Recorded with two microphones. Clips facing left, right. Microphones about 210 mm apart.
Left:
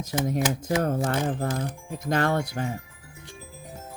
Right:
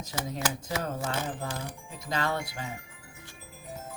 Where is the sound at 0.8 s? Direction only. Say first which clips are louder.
Left 7 dB; 55° left (ahead or behind).